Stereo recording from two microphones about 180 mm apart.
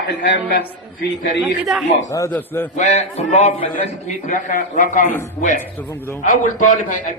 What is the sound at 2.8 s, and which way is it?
A man's voice, 40° left (ahead or behind).